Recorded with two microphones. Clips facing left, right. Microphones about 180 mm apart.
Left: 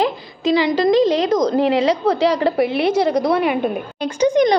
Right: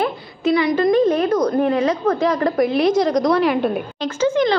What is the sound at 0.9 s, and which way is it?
A woman's voice, 85° left.